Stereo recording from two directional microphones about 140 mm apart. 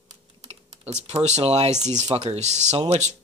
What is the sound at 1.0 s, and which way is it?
Speech, 50° right (ahead or behind).